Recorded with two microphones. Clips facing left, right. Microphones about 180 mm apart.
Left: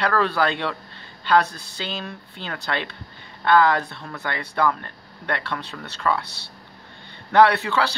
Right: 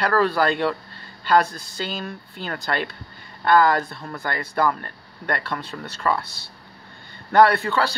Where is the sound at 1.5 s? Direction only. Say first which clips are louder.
Right 2 dB; 65° left (ahead or behind).